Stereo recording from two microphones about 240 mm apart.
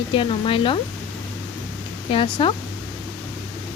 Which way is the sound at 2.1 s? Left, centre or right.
Left.